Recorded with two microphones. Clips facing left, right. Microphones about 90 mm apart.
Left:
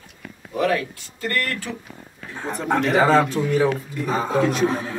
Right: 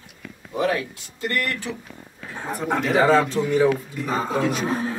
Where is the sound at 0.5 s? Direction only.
20° right (ahead or behind).